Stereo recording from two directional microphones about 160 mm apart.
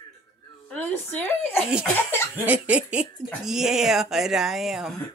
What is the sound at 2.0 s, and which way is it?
Speech, 15° left (ahead or behind).